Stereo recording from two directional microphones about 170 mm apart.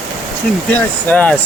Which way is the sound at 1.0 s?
10° left (ahead or behind).